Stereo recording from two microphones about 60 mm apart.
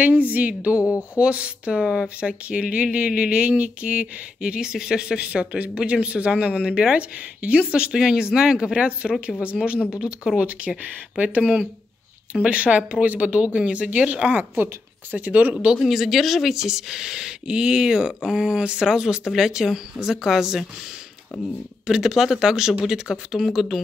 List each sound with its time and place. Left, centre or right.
0.0 s speech: right
0.7 s speech: left
1.1 s speech: centre
14.5 s speech: right
15.8 s speech: centre
21.8 s speech: centre